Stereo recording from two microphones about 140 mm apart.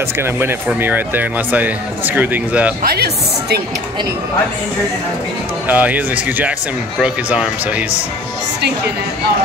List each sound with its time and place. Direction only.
0.2 s speech: 15° right (ahead or behind)
5.7 s speech: 10° right (ahead or behind)